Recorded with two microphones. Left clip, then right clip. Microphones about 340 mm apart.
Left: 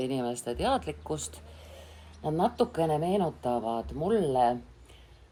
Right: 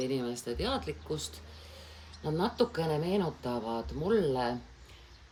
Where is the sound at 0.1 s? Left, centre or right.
Left.